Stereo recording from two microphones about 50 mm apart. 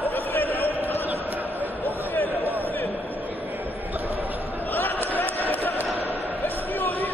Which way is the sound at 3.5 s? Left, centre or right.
Right.